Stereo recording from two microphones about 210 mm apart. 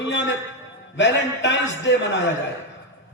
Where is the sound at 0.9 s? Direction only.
60° left (ahead or behind).